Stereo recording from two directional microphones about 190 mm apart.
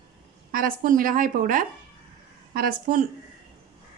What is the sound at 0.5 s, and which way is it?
Speech, 45° right (ahead or behind).